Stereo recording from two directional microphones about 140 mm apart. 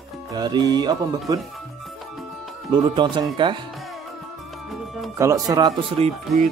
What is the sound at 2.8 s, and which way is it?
Speech, 35° right (ahead or behind).